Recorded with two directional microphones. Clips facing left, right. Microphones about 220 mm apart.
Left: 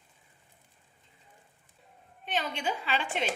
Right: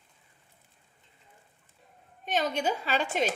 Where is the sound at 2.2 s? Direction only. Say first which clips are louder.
Right 4 dB; 40° right (ahead or behind).